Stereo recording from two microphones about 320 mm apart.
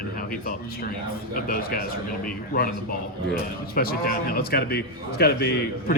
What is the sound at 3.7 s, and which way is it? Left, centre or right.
A man's voice, left.